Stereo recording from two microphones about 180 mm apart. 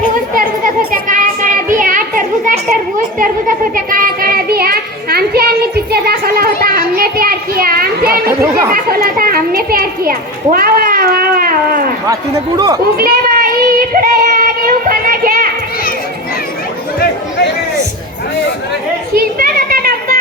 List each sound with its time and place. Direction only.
0.6 s children playing: 50° right (ahead or behind)
3.2 s a sound: 50° right (ahead or behind)
8.3 s chatter: 15° right (ahead or behind)
8.7 s children playing: 55° right (ahead or behind)
12.5 s speech: 20° right (ahead or behind)
13.0 s child singing: 55° right (ahead or behind)
19.1 s a sound: 55° right (ahead or behind)